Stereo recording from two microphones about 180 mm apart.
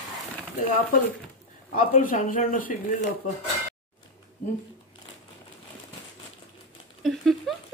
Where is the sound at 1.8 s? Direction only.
50° left (ahead or behind).